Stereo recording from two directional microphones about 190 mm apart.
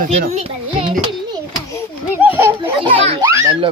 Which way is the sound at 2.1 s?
10° right (ahead or behind).